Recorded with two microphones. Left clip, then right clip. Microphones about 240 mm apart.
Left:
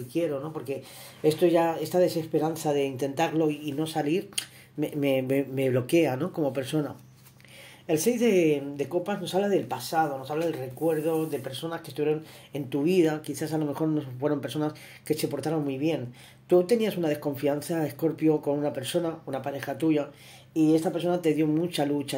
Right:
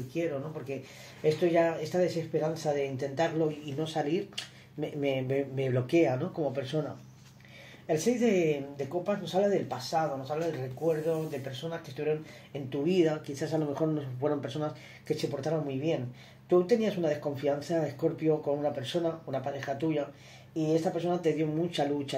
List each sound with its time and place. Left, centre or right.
1.2 s speech: left
7.8 s speech: left